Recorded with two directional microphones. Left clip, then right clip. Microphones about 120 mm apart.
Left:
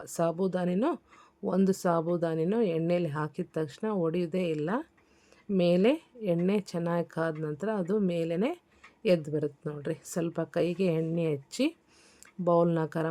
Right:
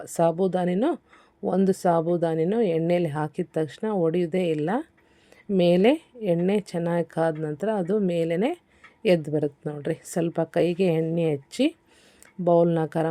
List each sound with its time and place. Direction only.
0.0 s speech: 25° right (ahead or behind)